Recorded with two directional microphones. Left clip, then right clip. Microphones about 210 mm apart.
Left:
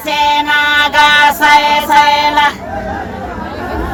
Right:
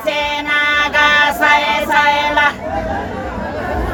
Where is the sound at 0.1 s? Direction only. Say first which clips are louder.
Left 7 dB; 20° left (ahead or behind).